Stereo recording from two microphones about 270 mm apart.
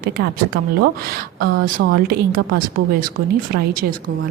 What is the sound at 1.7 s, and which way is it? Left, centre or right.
Speech, right.